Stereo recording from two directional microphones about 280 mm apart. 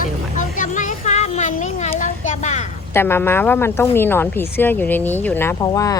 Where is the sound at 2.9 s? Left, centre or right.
Centre.